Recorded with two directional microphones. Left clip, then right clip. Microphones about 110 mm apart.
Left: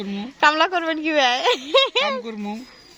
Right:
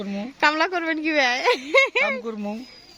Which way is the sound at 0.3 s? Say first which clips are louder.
Left 3 dB; 15° right (ahead or behind).